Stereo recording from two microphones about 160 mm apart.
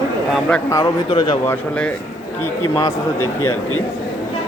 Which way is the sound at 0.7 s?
25° left (ahead or behind).